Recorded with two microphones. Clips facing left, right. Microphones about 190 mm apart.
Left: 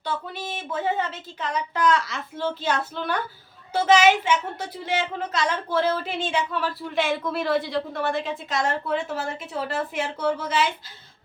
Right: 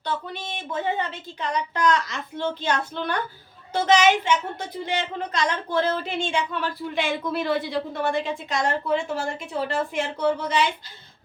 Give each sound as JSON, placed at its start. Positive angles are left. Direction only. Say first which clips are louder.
{"t": 0.0, "sound": "a woman's voice", "louder": "even", "side_deg": 5}